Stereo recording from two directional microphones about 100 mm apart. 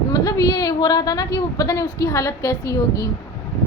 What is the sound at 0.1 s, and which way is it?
A woman's voice, 40° left (ahead or behind).